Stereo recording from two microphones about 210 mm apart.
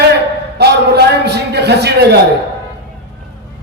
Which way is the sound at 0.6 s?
50° right (ahead or behind).